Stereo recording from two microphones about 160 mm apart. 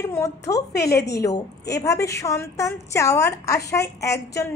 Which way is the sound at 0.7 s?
90° left.